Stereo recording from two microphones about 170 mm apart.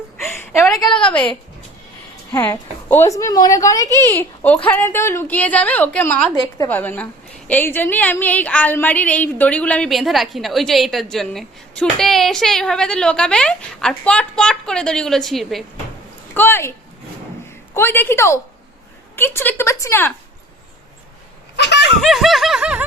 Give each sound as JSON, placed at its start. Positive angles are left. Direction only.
{"t": 0.3, "sound": "a sound", "side_deg": 15}
{"t": 0.9, "sound": "a woman's voice", "side_deg": 5}
{"t": 16.3, "sound": "a woman's voice", "side_deg": 10}
{"t": 17.7, "sound": "a woman's voice", "side_deg": 10}
{"t": 21.5, "sound": "a sound", "side_deg": 85}
{"t": 22.0, "sound": "snicker", "side_deg": 0}